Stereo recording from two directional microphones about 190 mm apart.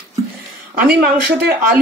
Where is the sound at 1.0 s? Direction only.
55° right (ahead or behind).